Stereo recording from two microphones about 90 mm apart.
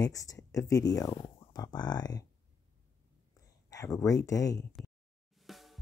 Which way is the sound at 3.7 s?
35° left (ahead or behind).